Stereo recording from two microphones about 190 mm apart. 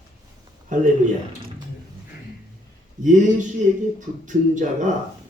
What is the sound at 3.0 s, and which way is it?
Speech, 40° right (ahead or behind).